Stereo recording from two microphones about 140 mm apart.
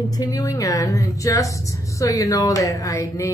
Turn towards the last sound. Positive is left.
turn(degrees=20)  # may be behind; listen again after turning